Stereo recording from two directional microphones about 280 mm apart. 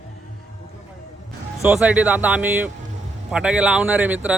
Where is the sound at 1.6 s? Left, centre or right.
Centre.